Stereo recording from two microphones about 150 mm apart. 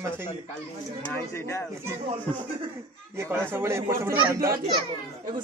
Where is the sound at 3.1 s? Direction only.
15° right (ahead or behind).